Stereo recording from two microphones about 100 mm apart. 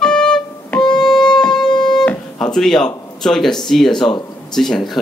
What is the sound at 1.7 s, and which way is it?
Music, 45° left (ahead or behind).